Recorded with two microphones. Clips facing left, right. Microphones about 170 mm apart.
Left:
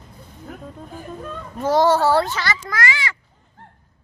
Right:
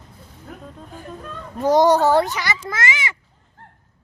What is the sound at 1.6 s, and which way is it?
A child's voice, 15° right (ahead or behind).